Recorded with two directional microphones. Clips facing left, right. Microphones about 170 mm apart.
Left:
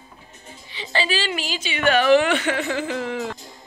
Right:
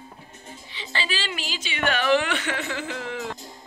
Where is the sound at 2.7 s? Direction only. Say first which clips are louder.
Left 6 dB; 40° left (ahead or behind).